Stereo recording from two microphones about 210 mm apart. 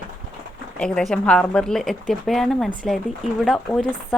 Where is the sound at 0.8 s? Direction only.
5° left (ahead or behind).